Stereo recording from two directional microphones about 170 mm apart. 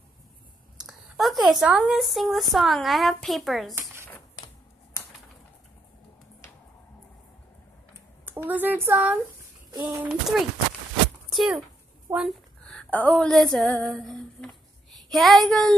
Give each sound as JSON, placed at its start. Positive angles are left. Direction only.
{"t": 0.7, "sound": "speech", "side_deg": 0}
{"t": 3.7, "sound": "a sound", "side_deg": -15}
{"t": 8.3, "sound": "speech", "side_deg": -10}
{"t": 9.7, "sound": "speech", "side_deg": -20}
{"t": 11.3, "sound": "speech", "side_deg": 0}
{"t": 12.1, "sound": "speech", "side_deg": -15}
{"t": 12.6, "sound": "speech", "side_deg": 5}